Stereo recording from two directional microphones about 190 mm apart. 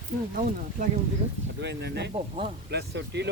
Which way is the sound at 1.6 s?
65° right (ahead or behind).